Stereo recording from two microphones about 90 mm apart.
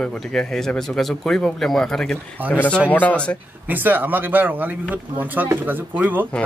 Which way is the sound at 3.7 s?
20° right (ahead or behind).